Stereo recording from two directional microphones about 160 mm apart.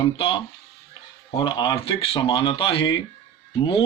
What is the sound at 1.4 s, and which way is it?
Speech, 30° left (ahead or behind).